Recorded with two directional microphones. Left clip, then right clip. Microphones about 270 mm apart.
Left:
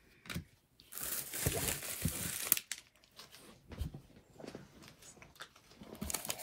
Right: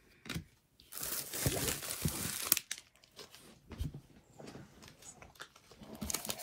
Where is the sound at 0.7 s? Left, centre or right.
Centre.